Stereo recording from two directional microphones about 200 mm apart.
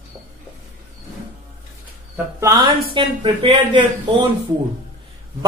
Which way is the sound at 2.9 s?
25° right (ahead or behind).